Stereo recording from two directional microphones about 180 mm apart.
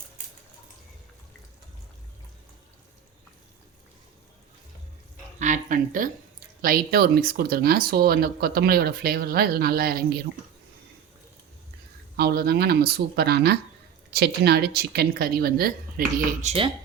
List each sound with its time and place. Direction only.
5.4 s speech: 45° right (ahead or behind)
12.1 s speech: 60° right (ahead or behind)
16.4 s speech: 40° right (ahead or behind)